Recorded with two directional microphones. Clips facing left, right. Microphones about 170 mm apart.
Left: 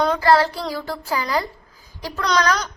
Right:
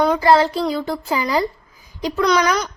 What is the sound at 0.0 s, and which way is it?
A woman's voice, 15° right (ahead or behind).